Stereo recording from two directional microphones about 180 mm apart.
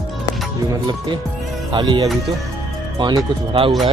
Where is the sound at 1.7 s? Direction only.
25° right (ahead or behind).